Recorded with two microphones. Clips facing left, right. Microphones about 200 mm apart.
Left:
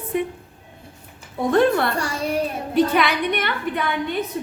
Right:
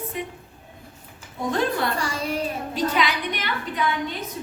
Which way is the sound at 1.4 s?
60° left (ahead or behind).